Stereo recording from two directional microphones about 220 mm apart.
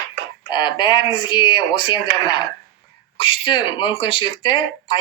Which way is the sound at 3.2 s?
20° left (ahead or behind).